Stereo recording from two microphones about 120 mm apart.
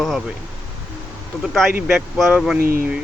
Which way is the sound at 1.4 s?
Centre (ahead or behind).